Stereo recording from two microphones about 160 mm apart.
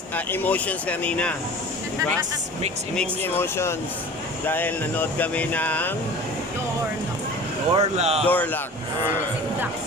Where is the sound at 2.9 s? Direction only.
10° left (ahead or behind).